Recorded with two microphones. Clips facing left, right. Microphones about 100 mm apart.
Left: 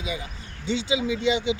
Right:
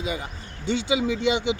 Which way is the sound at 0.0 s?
45° right (ahead or behind).